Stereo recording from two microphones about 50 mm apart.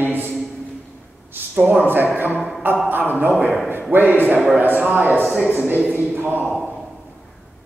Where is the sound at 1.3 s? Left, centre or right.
Right.